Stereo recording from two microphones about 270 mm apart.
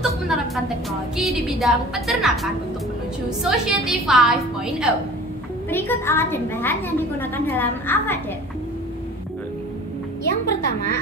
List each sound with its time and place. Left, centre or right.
1.1 s a woman's voice: centre
10.2 s a woman's voice: left